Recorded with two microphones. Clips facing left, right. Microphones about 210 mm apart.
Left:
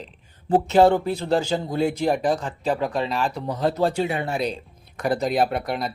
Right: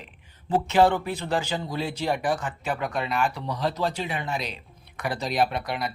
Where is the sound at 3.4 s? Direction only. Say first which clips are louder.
Left 5 dB; 50° left (ahead or behind).